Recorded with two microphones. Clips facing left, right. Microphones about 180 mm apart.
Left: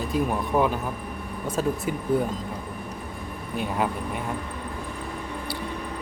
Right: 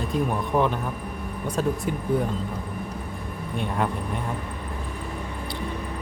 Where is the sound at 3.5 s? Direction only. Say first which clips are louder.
Even; 5° left (ahead or behind).